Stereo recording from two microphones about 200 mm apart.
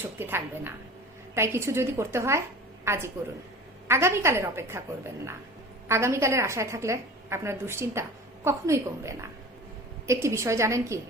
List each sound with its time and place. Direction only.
0.0 s a woman's voice: 10° right (ahead or behind)
5.9 s a woman's voice: 15° right (ahead or behind)